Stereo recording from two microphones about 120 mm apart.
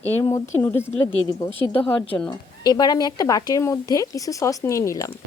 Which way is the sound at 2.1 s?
15° left (ahead or behind).